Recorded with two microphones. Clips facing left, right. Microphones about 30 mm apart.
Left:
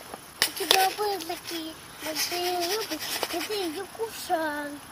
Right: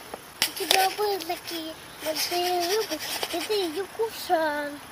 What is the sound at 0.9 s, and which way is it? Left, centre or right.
Speech, centre.